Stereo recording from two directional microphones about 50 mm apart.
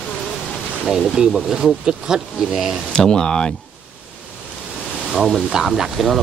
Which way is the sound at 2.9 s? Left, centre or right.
Centre.